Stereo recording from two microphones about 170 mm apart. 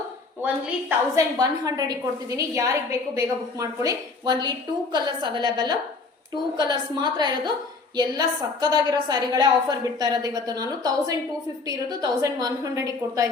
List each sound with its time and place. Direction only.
0.4 s a woman's voice: 15° right (ahead or behind)